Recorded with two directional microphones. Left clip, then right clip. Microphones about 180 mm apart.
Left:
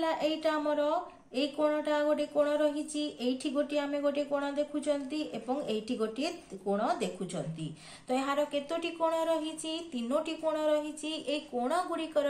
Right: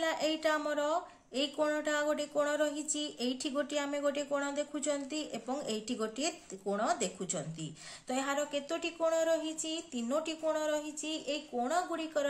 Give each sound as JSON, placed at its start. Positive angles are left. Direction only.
{"t": 0.0, "sound": "speech", "side_deg": -35}